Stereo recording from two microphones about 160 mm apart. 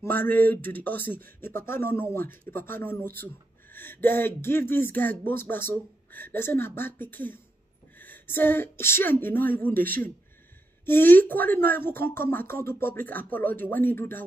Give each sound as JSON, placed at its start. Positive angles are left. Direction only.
{"t": 0.0, "sound": "a woman's voice", "side_deg": 10}